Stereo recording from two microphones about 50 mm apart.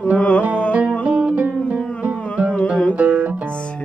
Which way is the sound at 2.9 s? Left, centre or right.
Right.